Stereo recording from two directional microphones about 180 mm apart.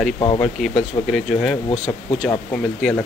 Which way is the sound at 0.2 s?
30° left (ahead or behind).